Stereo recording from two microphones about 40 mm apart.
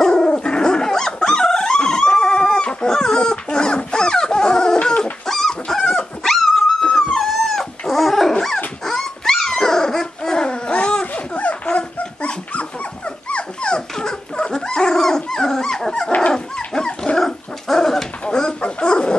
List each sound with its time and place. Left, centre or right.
0.0 s dog: centre
11.3 s a sound: left
11.7 s dog: left
17.2 s dog: centre
18.3 s dog: left